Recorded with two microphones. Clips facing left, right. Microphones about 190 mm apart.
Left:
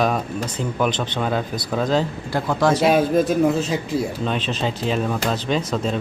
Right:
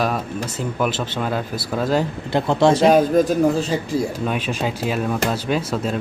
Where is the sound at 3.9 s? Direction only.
10° right (ahead or behind).